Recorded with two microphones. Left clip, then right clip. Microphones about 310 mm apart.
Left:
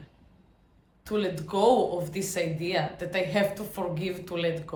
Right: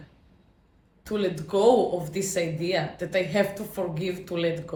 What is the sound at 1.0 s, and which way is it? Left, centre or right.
Speech, centre.